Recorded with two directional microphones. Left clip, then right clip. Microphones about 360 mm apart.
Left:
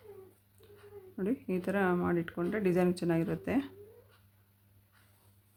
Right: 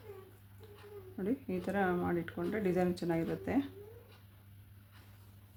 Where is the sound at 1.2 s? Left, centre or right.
Centre.